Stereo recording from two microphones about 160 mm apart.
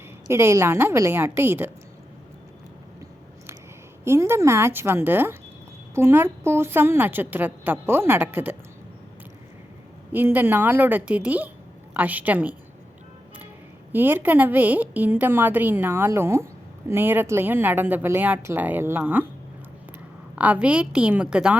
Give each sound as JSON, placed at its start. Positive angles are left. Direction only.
{"t": 0.3, "sound": "a woman's voice", "side_deg": -15}
{"t": 4.0, "sound": "a woman's voice", "side_deg": -15}
{"t": 10.1, "sound": "a woman's voice", "side_deg": -10}
{"t": 13.9, "sound": "a woman's voice", "side_deg": -10}
{"t": 20.3, "sound": "a woman's voice", "side_deg": -10}